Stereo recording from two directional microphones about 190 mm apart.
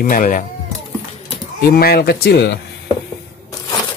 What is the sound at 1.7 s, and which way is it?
Speech, 55° left (ahead or behind).